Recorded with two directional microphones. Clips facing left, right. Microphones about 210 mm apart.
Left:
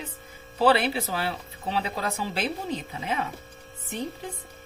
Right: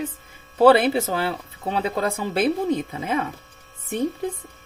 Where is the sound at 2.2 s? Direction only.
50° right (ahead or behind).